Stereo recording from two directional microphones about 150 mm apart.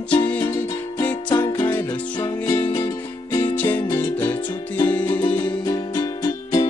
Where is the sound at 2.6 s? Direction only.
35° left (ahead or behind).